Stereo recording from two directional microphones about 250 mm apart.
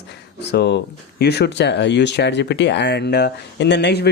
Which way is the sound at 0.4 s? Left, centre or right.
Left.